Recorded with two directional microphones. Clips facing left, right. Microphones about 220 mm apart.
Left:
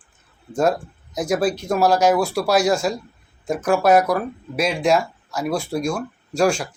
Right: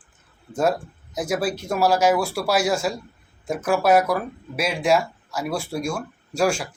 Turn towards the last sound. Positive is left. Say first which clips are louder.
# left 3 dB
turn(degrees=-5)  # may be behind; listen again after turning